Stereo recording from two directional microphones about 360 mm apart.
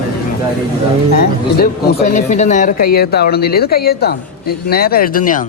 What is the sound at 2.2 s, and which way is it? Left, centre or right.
A man's voice, centre.